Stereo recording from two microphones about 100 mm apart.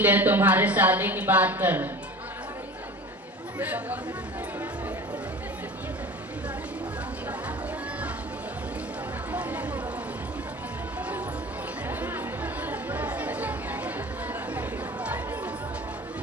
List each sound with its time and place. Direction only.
0.0 s a woman's voice: 15° right (ahead or behind)
3.6 s a woman's voice: 15° right (ahead or behind)
9.3 s chatter: 15° right (ahead or behind)
11.9 s chatter: 20° right (ahead or behind)